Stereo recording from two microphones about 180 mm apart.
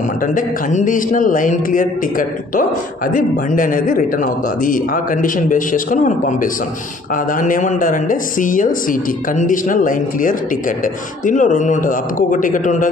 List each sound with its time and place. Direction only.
0.3 s a man's voice: 45° left (ahead or behind)